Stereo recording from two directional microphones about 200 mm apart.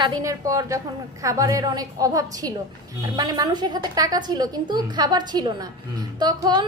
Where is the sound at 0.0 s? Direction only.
20° right (ahead or behind).